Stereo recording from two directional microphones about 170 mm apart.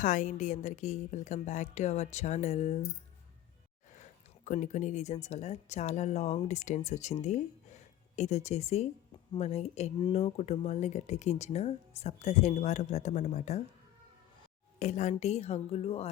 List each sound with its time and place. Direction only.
0.0 s a woman's voice: 45° left (ahead or behind)
3.9 s speech: 45° left (ahead or behind)
14.8 s speech: 45° left (ahead or behind)